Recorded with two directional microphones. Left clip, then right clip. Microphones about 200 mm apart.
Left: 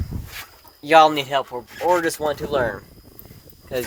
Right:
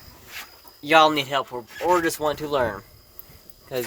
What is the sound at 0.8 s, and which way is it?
Speech, 10° left (ahead or behind).